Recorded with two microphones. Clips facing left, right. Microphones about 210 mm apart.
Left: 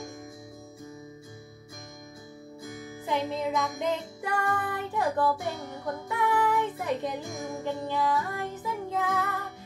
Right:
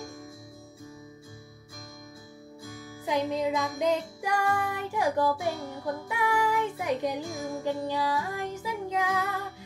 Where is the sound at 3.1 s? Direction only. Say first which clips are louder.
Right 2 dB; 15° right (ahead or behind).